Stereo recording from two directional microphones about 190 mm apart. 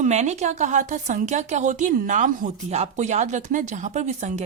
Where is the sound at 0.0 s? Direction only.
35° right (ahead or behind).